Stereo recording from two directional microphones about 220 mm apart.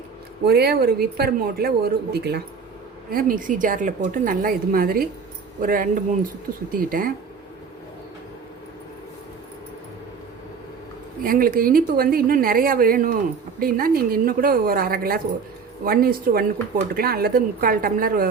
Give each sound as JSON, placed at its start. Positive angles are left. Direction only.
{"t": 0.4, "sound": "a woman's voice", "side_deg": -45}
{"t": 11.2, "sound": "a woman's voice", "side_deg": -40}